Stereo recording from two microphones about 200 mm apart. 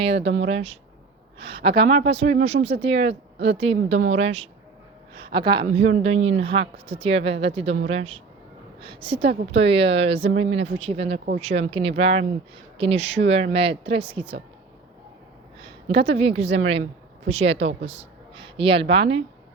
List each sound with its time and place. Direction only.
0.3 s speech: 65° right (ahead or behind)
0.5 s a woman's voice: 30° right (ahead or behind)
5.6 s a woman's voice: 35° right (ahead or behind)
10.3 s speech: 80° right
10.6 s a woman's voice: 30° right (ahead or behind)
15.9 s a woman's voice: 30° right (ahead or behind)